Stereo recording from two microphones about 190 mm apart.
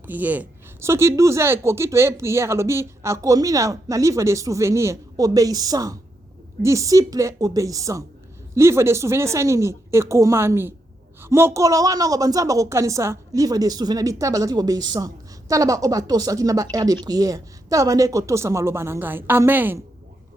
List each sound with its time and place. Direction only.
0.1 s speech: 10° right (ahead or behind)